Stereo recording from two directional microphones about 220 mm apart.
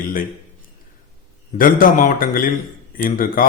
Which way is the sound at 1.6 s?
40° left (ahead or behind).